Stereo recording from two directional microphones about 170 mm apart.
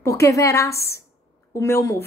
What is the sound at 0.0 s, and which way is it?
Speech, 15° left (ahead or behind).